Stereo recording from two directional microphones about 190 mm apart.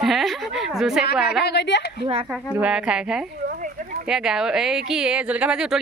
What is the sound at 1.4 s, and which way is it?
Speech, 65° left (ahead or behind).